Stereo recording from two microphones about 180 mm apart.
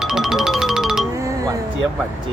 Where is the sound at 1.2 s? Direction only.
20° right (ahead or behind).